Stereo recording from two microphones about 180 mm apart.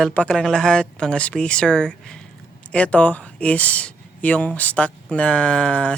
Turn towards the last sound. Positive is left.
turn(degrees=5)  # may be behind; listen again after turning